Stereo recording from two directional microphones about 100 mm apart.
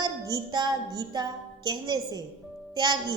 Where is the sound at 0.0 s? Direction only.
45° right (ahead or behind).